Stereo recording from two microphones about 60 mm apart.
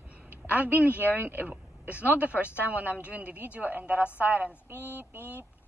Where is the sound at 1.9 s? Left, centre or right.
Left.